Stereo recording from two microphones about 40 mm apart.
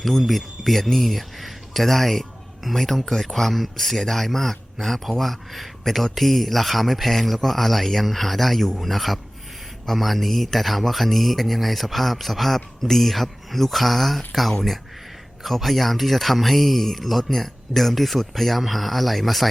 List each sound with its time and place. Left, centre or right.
0.0 s speech: centre
15.4 s speech: centre